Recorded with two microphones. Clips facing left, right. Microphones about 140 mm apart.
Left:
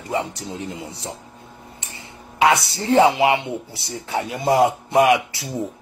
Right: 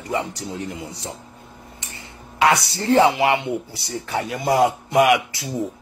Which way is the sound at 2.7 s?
20° left (ahead or behind).